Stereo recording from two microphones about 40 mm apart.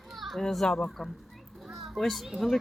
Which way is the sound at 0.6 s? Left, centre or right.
Left.